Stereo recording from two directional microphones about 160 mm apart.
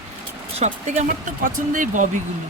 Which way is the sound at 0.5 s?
45° right (ahead or behind).